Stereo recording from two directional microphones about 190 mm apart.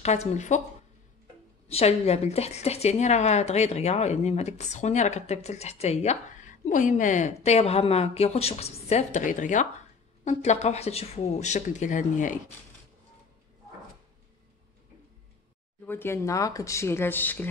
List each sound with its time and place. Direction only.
0.0 s a woman's voice: 35° left (ahead or behind)
1.7 s a woman's voice: 30° left (ahead or behind)
15.8 s speech: 10° left (ahead or behind)